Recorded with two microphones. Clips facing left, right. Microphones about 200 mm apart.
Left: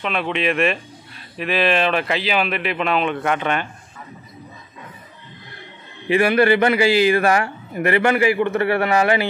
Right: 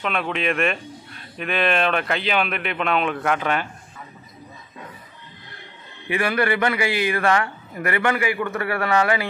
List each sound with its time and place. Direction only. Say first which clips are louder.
0.0 s speech: left 2 dB; centre (ahead or behind)
6.0 s a man's voice: left 6 dB; 25° left (ahead or behind)